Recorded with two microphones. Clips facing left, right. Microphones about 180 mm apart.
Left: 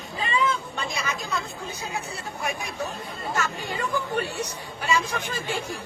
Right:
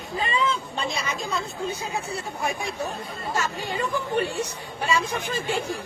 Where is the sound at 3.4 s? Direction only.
25° right (ahead or behind).